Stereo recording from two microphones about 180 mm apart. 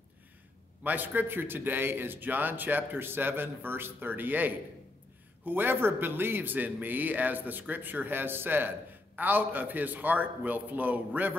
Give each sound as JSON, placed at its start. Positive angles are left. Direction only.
{"t": 0.8, "sound": "a man's voice", "side_deg": -10}